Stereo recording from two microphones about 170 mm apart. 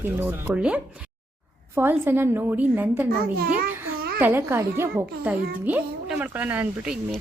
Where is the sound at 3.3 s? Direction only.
60° right (ahead or behind).